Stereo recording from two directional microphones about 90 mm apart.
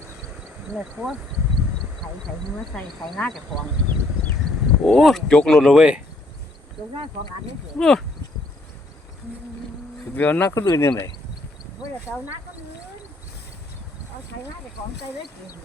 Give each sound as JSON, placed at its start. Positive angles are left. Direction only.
{"t": 0.8, "sound": "speech", "side_deg": -10}
{"t": 2.7, "sound": "speech", "side_deg": 10}
{"t": 4.8, "sound": "speech", "side_deg": 0}
{"t": 7.8, "sound": "speech", "side_deg": 5}
{"t": 10.2, "sound": "speech", "side_deg": 20}
{"t": 10.5, "sound": "speech", "side_deg": 35}